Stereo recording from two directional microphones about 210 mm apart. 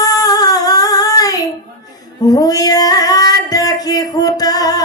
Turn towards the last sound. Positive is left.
turn(degrees=15)  # may be behind; listen again after turning